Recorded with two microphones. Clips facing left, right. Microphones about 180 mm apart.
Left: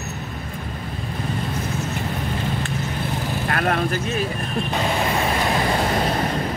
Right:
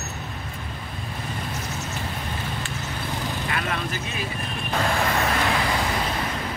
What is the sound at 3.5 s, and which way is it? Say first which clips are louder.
Speech: left 10 dB; 55° left (ahead or behind).